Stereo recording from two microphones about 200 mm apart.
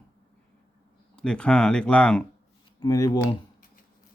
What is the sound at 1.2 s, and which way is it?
A man's voice, 5° left (ahead or behind).